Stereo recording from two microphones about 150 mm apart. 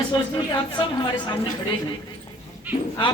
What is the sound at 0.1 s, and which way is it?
A man's voice, 30° left (ahead or behind).